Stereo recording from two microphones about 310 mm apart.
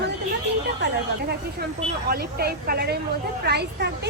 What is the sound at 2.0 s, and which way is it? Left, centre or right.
A woman's voice, right.